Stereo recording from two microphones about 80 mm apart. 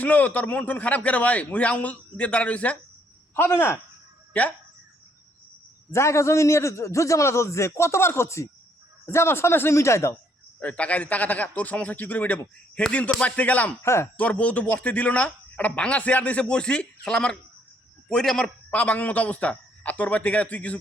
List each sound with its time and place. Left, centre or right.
0.0 s a man's voice: centre
3.3 s a man's voice: left
5.9 s a man's voice: left
10.6 s a man's voice: centre
13.8 s a man's voice: left
14.2 s a man's voice: centre
18.7 s a man's voice: centre